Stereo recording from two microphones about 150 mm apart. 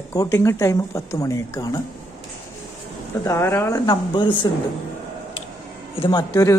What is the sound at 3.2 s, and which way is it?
Speech, 20° left (ahead or behind).